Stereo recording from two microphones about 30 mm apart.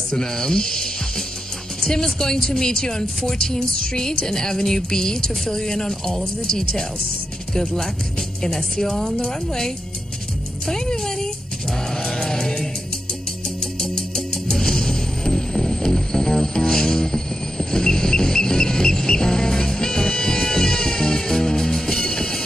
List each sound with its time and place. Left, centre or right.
0.1 s speech: left
1.8 s music: left
2.1 s a woman's voice: centre
9.0 s a woman's voice: left
10.7 s music: centre
13.7 s music: centre